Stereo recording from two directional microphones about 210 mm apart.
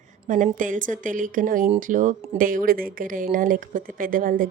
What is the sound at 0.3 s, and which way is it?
Speech, 40° right (ahead or behind).